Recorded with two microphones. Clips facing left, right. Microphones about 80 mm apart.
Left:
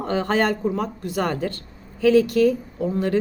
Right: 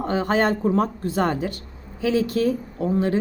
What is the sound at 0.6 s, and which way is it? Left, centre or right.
A woman's voice, right.